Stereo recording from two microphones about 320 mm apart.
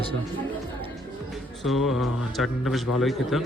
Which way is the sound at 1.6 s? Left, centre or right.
Centre.